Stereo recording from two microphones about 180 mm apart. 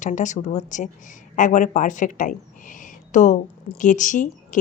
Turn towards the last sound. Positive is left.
turn(degrees=45)  # may be behind; listen again after turning